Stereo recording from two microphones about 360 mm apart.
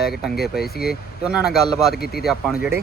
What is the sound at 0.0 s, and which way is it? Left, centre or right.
Speech, centre.